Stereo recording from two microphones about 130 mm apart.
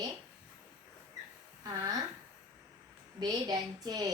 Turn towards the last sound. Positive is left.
turn(degrees=-30)  # may be behind; listen again after turning